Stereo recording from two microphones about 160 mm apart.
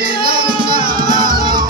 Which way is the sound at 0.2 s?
65° right (ahead or behind).